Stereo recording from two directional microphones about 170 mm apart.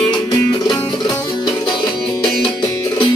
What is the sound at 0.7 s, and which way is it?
Music, 25° left (ahead or behind).